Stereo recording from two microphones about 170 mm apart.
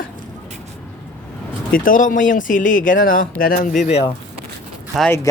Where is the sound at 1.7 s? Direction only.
55° left (ahead or behind).